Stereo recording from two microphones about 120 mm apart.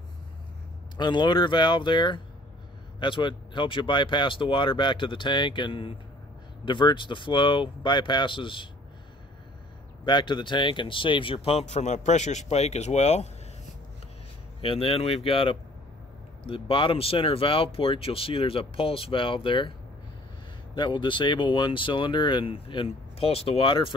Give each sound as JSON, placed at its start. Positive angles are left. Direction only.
{"t": 0.9, "sound": "speech", "side_deg": 40}
{"t": 10.0, "sound": "speech", "side_deg": 40}
{"t": 14.6, "sound": "speech", "side_deg": 50}
{"t": 20.7, "sound": "speech", "side_deg": 40}